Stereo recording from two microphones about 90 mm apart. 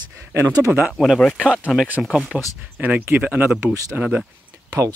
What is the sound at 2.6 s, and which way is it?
Speech, 20° right (ahead or behind).